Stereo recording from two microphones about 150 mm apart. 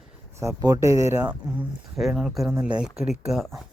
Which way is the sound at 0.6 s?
20° right (ahead or behind).